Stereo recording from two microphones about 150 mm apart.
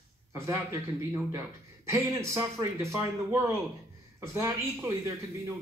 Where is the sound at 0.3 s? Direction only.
20° right (ahead or behind).